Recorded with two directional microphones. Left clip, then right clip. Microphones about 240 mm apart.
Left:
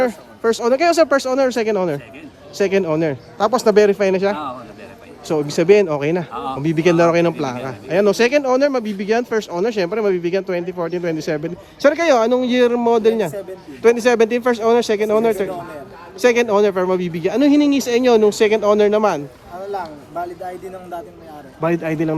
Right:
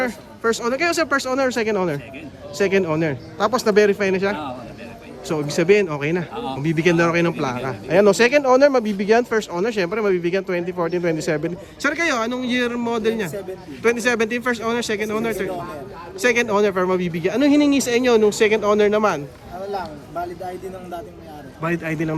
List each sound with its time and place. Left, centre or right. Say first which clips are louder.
0.0 s speech: left 4 dB; centre
21.6 s speech: left 5 dB; centre